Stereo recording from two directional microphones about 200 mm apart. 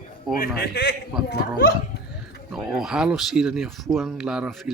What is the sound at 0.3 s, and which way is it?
A man's voice, 50° left (ahead or behind).